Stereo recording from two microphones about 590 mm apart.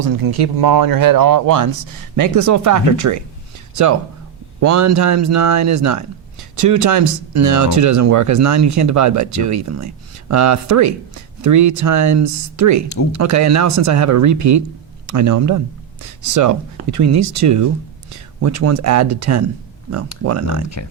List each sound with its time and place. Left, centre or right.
0.0 s speech: right
4.6 s speech: right
20.8 s speech: left